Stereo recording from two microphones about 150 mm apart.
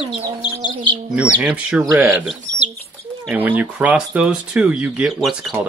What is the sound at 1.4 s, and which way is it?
Speech, 10° right (ahead or behind).